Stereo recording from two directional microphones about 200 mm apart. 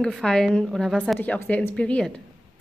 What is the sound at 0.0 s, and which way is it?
A woman's voice, 5° left (ahead or behind).